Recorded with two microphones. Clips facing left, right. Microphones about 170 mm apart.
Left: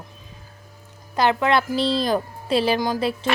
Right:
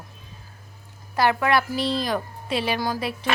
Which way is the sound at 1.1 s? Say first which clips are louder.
Left 1 dB; 20° left (ahead or behind).